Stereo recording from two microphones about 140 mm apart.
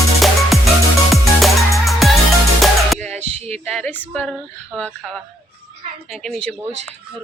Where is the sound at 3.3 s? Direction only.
50° right (ahead or behind).